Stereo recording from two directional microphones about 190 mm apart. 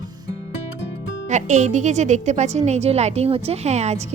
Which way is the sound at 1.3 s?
40° right (ahead or behind).